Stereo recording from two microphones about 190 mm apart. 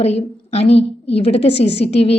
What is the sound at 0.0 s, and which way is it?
A woman's voice, 35° left (ahead or behind).